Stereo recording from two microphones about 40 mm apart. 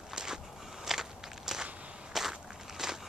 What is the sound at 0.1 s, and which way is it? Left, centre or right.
Walk, centre.